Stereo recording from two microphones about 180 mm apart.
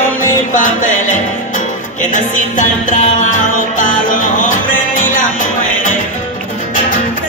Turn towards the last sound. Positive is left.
turn(degrees=45)  # may be behind; listen again after turning